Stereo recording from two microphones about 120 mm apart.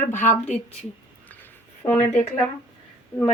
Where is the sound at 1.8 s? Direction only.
25° left (ahead or behind).